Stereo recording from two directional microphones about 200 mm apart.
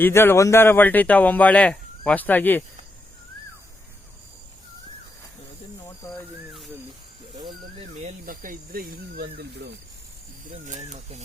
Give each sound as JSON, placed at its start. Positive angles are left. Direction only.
{"t": 0.0, "sound": "speech", "side_deg": 10}
{"t": 6.1, "sound": "a sound", "side_deg": 0}
{"t": 8.0, "sound": "speech", "side_deg": -45}
{"t": 10.7, "sound": "speech", "side_deg": -35}